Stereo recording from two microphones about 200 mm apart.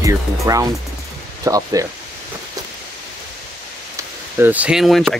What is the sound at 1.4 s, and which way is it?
Speech, 15° right (ahead or behind).